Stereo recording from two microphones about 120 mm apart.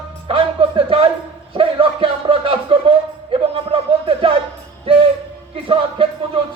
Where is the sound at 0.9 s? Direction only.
50° right (ahead or behind).